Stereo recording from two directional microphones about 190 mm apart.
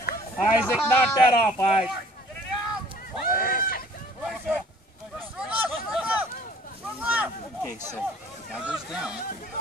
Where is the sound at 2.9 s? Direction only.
50° left (ahead or behind).